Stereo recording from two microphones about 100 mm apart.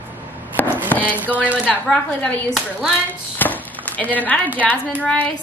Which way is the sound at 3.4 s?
15° left (ahead or behind).